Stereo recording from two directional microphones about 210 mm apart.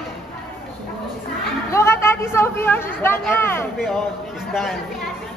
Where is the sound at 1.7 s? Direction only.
10° left (ahead or behind).